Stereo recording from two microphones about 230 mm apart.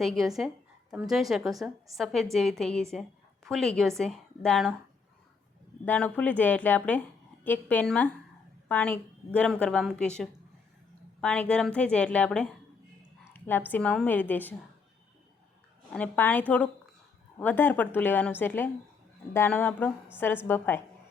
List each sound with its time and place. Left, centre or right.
0.0 s a woman's voice: centre
5.8 s a woman's voice: centre
15.9 s a woman's voice: centre